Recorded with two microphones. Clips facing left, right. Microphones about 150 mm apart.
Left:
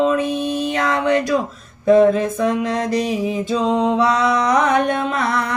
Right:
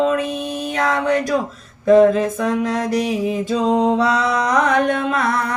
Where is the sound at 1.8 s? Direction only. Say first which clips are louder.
Right 1 dB; 40° right (ahead or behind).